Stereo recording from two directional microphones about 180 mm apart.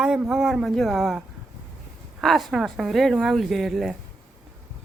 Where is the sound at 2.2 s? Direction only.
Centre (ahead or behind).